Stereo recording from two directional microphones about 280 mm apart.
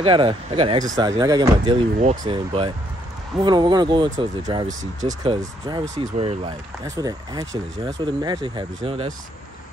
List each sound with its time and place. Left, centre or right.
0.0 s speech: centre